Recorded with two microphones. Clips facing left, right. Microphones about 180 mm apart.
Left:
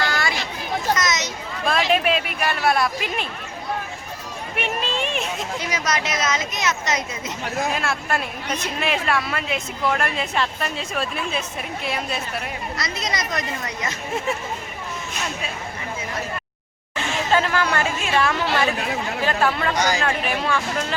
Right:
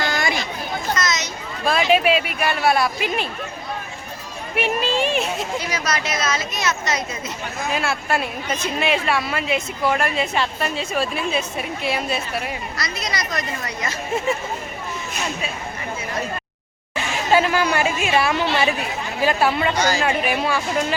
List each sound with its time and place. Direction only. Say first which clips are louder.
0.1 s chatter: right 2 dB; 20° right (ahead or behind)
0.9 s a sound: even; 20° left (ahead or behind)
1.6 s a woman's voice: right 3 dB; centre (ahead or behind)
4.5 s a woman's voice: right 5 dB; 5° right (ahead or behind)
5.5 s speech: even; 20° left (ahead or behind)
7.7 s a woman's voice: right 2 dB; centre (ahead or behind)
12.7 s speech: even; 20° left (ahead or behind)
17.3 s speech: right 3 dB; 15° right (ahead or behind)